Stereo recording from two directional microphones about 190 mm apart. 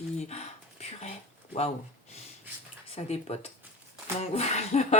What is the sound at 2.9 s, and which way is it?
Speech, 35° left (ahead or behind).